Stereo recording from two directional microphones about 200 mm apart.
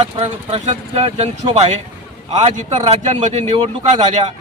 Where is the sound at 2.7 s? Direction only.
35° right (ahead or behind).